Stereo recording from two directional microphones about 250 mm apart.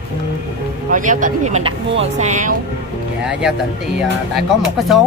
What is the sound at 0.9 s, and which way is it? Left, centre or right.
A woman's voice, right.